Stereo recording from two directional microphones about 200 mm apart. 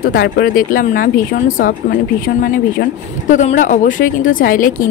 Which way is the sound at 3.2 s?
40° left (ahead or behind).